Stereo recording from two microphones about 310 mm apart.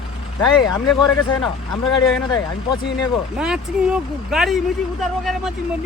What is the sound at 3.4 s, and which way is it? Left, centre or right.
Speech, centre.